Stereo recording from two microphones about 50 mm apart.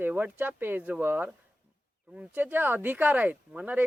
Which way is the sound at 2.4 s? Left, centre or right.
Right.